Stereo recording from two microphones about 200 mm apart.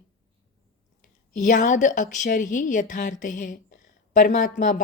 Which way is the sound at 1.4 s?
40° left (ahead or behind).